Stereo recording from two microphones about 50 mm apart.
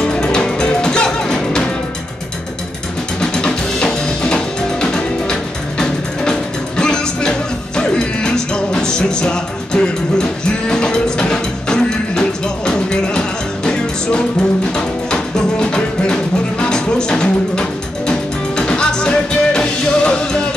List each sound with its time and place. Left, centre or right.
0.0 s music: centre
3.2 s drum kit: centre
6.8 s music: centre